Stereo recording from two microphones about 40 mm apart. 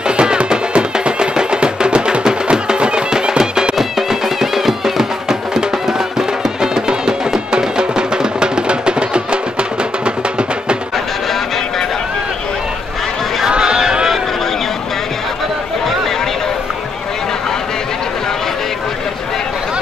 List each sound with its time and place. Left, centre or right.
0.1 s music: right
3.7 s music: centre; by 10.1 s right
13.5 s a sound: centre